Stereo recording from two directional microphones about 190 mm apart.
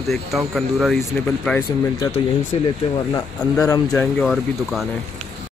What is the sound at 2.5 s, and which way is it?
Speech, 30° left (ahead or behind).